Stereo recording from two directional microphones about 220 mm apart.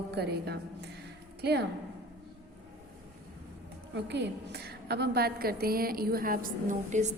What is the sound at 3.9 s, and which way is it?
A woman's voice, 50° right (ahead or behind).